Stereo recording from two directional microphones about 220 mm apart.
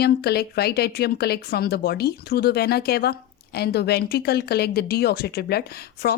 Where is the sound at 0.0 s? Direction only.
45° left (ahead or behind).